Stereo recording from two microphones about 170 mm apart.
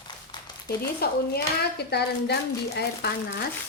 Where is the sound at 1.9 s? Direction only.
75° left (ahead or behind).